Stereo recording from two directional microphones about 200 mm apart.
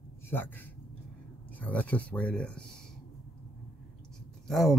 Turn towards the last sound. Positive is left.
turn(degrees=0)  # may be behind; listen again after turning